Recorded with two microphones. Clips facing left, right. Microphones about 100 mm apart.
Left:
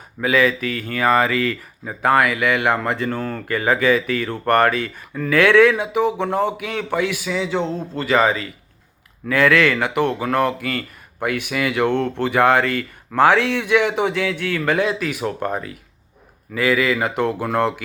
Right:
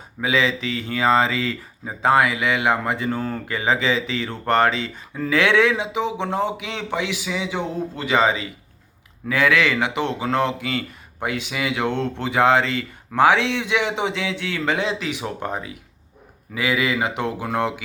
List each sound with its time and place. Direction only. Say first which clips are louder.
0.2 s speech: left 3 dB; 20° right (ahead or behind)